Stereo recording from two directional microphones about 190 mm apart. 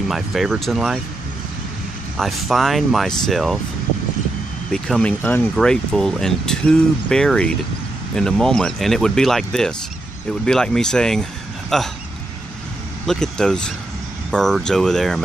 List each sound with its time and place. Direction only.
0.1 s speech: centre (ahead or behind)
2.1 s speech: centre (ahead or behind)
4.7 s speech: 5° left (ahead or behind)
13.0 s speech: 5° left (ahead or behind)